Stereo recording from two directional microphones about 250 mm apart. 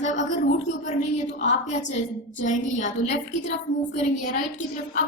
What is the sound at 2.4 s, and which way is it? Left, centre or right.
A woman's voice, left.